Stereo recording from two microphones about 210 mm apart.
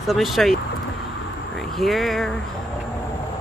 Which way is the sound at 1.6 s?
Centre (ahead or behind).